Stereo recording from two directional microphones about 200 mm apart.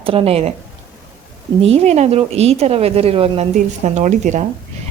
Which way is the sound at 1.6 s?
30° right (ahead or behind).